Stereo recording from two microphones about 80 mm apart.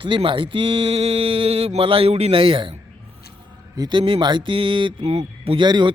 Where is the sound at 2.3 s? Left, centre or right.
Right.